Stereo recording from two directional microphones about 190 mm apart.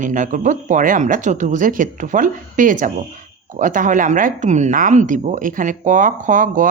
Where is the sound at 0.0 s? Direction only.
45° right (ahead or behind).